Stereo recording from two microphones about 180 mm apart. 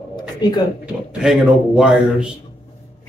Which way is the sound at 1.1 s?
5° right (ahead or behind).